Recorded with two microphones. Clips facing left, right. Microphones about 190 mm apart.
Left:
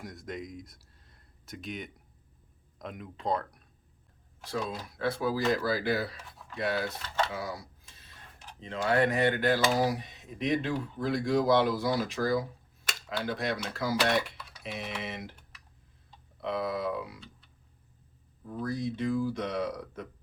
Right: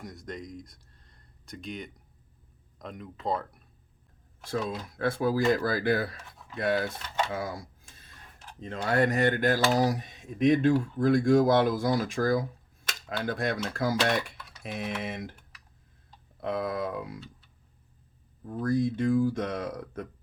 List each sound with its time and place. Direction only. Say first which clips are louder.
0.0 s speech: even; centre (ahead or behind)
4.9 s speech: right 3 dB; 50° right (ahead or behind)
7.3 s a sound: right 3 dB; 50° right (ahead or behind)
8.7 s speech: right 1 dB; 45° right (ahead or behind)
16.4 s speech: right 1 dB; 50° right (ahead or behind)
18.6 s speech: right 6 dB; 50° right (ahead or behind)